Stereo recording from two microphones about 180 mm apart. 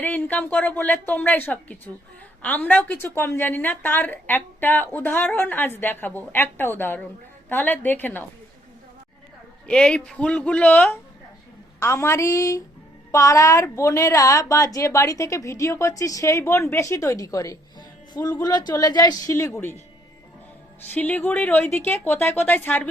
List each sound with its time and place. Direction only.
0.0 s a woman's voice: 10° left (ahead or behind)
9.6 s a woman's voice: 5° left (ahead or behind)
20.9 s a woman's voice: 10° left (ahead or behind)